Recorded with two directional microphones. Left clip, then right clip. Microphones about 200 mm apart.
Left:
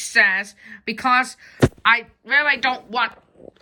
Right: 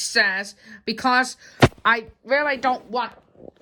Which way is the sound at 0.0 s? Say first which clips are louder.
Left 3 dB; 15° right (ahead or behind).